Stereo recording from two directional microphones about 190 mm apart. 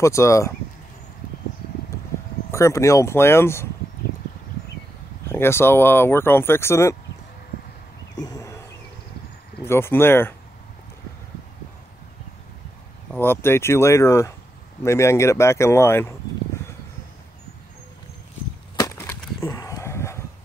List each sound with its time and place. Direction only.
0.0 s speech: 15° left (ahead or behind)
2.5 s speech: 15° left (ahead or behind)
5.3 s speech: 10° left (ahead or behind)
8.2 s wild animals: 20° left (ahead or behind)
9.7 s speech: 10° left (ahead or behind)
13.1 s speech: 10° left (ahead or behind)
18.8 s splinter: 15° left (ahead or behind)
19.4 s dog: 15° left (ahead or behind)